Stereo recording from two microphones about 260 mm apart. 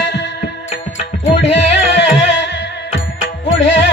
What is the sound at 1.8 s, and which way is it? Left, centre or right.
Music, left.